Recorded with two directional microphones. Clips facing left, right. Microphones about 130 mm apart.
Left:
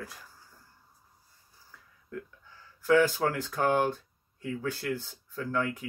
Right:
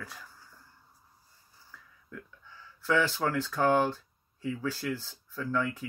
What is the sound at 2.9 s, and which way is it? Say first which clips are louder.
Speech: left 3 dB; 45° left (ahead or behind).